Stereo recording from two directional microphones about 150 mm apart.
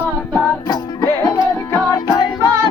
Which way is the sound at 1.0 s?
20° left (ahead or behind).